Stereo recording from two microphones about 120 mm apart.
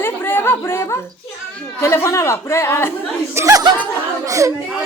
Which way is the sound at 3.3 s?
25° right (ahead or behind).